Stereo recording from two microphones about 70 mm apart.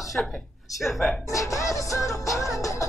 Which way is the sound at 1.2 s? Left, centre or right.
Left.